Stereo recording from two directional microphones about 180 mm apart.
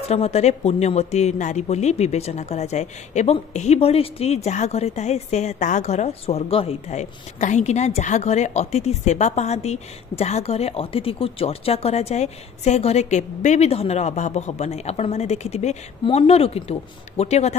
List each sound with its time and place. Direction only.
0.1 s speech: 35° left (ahead or behind)